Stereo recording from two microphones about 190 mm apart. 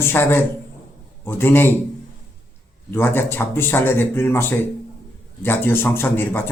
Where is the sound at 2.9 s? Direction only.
10° left (ahead or behind).